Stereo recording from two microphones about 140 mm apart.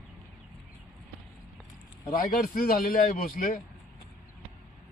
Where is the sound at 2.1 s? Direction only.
85° left.